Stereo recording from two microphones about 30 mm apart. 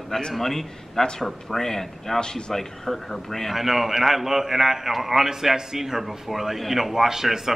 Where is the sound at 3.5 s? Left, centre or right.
Centre.